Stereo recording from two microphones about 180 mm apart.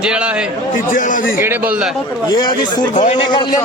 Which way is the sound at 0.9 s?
45° left (ahead or behind).